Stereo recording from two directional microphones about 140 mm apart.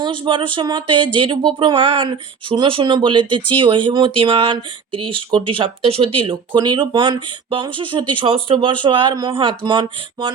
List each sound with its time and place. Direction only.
0.0 s speech: 35° right (ahead or behind)